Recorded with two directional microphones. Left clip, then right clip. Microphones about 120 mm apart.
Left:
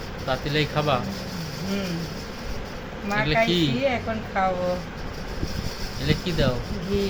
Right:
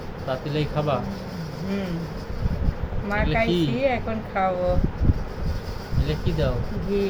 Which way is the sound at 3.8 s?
35° right (ahead or behind).